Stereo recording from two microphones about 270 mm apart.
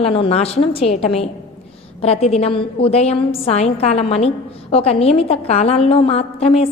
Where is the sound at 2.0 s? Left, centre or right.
Left.